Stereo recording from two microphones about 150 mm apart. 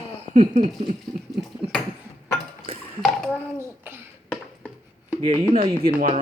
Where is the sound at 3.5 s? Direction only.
15° right (ahead or behind).